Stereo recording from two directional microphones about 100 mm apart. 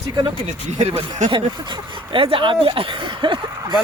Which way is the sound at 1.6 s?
45° right (ahead or behind).